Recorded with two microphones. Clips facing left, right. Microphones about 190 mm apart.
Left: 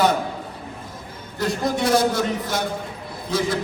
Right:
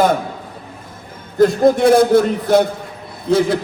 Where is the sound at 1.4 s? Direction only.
55° right (ahead or behind).